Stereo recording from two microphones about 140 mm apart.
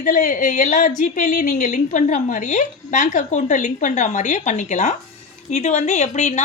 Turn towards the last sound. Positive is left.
turn(degrees=55)  # may be behind; listen again after turning